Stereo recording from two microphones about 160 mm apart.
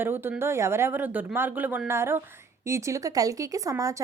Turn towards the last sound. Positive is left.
turn(degrees=-20)  # may be behind; listen again after turning